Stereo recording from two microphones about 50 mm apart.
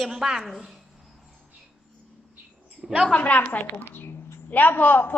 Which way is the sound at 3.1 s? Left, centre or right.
Left.